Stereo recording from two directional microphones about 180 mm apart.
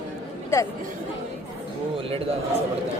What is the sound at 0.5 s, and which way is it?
Speech, 15° left (ahead or behind).